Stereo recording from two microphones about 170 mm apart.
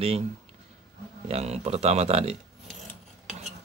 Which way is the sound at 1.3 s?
40° right (ahead or behind).